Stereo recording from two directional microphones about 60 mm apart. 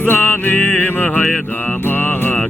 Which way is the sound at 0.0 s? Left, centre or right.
Left.